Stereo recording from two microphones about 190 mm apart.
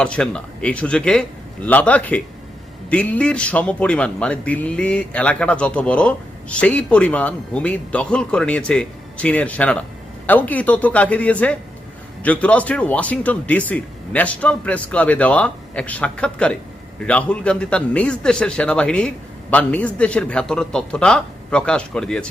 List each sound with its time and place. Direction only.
0.0 s a man's voice: 5° left (ahead or behind)